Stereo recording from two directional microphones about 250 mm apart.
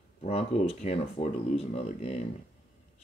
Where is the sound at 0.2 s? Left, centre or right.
Left.